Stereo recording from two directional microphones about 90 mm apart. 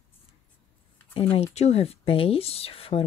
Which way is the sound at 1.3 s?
90° left.